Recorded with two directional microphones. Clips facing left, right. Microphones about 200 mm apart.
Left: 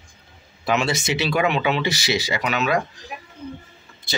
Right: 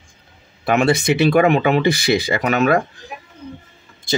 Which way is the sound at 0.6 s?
55° right (ahead or behind).